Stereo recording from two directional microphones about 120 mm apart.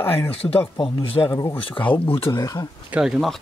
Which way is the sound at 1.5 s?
45° left (ahead or behind).